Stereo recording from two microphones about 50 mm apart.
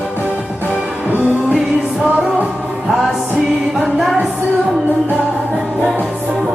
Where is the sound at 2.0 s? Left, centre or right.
Centre.